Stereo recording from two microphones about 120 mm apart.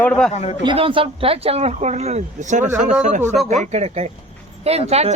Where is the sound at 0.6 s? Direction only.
45° right (ahead or behind); by 3.2 s 90° right.